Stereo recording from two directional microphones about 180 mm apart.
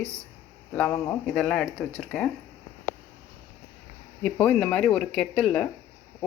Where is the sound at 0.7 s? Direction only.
10° left (ahead or behind).